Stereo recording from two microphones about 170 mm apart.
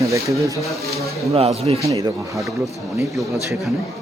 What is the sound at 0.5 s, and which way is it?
Speech, 20° left (ahead or behind).